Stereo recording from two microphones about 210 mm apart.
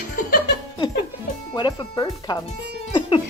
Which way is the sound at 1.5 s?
20° left (ahead or behind).